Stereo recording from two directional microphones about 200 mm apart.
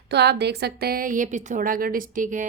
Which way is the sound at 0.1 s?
55° right (ahead or behind).